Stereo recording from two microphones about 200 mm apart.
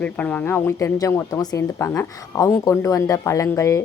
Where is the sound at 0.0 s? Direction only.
5° left (ahead or behind).